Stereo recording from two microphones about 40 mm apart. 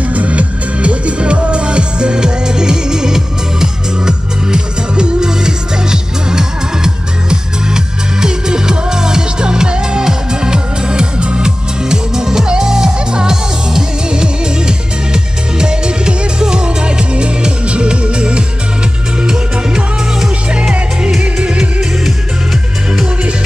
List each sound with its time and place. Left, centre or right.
0.1 s music: right
21.2 s music: centre